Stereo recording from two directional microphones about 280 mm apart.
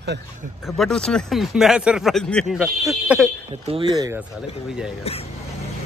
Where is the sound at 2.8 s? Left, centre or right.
Centre.